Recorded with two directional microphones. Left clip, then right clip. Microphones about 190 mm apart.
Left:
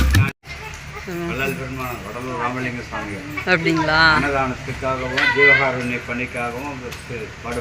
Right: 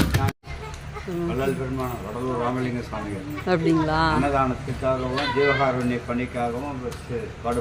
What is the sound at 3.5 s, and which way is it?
Speech, 15° right (ahead or behind).